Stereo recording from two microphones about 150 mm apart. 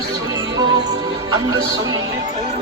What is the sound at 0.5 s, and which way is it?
Music, 25° right (ahead or behind).